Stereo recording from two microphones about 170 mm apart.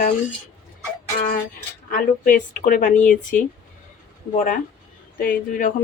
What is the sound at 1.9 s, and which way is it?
Speech, 55° left (ahead or behind).